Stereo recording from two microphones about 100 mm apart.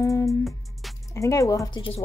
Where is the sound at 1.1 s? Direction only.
30° left (ahead or behind).